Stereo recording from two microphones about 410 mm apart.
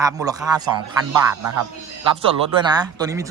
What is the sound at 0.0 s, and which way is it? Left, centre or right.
Speech, centre.